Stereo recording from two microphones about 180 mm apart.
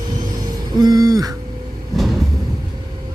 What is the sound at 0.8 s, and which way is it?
Speech, 20° right (ahead or behind).